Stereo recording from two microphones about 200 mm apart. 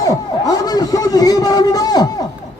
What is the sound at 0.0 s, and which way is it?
A man's voice, 15° left (ahead or behind).